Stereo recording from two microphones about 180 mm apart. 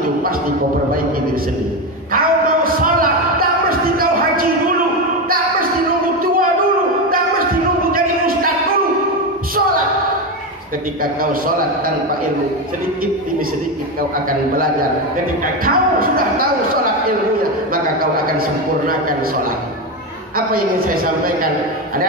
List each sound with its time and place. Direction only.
2.1 s a sound: 55° right (ahead or behind)
7.9 s a sound: 55° right (ahead or behind)
11.4 s a woman's voice: 55° right (ahead or behind)
15.6 s a woman's voice: 55° right (ahead or behind)
18.1 s a woman's voice: 55° right (ahead or behind)
20.3 s a woman's voice: 55° right (ahead or behind)